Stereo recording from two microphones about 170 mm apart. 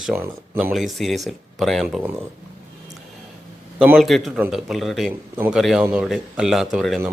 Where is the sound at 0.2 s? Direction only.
10° right (ahead or behind).